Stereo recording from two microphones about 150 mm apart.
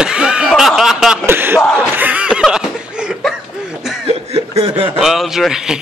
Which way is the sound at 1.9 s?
10° right (ahead or behind).